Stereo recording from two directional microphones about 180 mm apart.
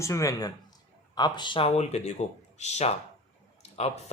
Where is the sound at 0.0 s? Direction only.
15° left (ahead or behind).